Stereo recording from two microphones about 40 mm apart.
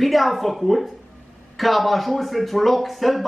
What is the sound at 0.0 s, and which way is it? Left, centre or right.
Speech, centre.